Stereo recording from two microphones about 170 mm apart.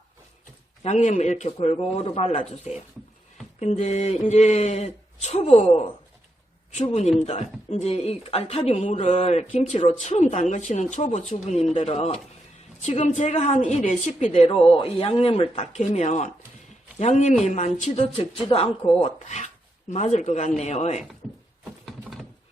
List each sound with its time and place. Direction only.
0.8 s a woman's voice: 45° left (ahead or behind)
21.6 s wood: centre (ahead or behind)